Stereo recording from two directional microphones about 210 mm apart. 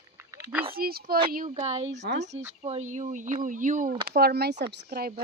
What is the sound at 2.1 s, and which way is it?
Speech, 50° right (ahead or behind).